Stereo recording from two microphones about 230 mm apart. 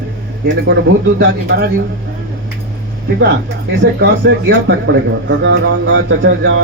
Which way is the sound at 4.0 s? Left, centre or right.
Right.